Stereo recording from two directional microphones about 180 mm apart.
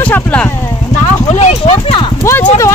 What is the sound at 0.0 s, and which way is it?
Speech, 10° left (ahead or behind).